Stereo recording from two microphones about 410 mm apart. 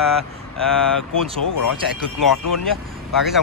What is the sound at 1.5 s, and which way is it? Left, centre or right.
Speech, left.